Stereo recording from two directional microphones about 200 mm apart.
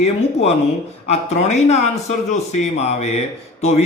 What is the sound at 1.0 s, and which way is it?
A man's voice, 35° left (ahead or behind).